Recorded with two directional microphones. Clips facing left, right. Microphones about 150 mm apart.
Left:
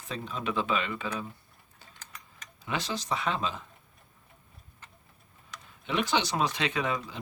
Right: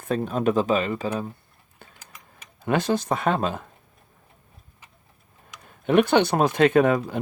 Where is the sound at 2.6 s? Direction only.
55° right (ahead or behind).